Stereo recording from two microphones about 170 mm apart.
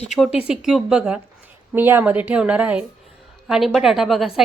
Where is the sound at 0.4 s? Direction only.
5° right (ahead or behind).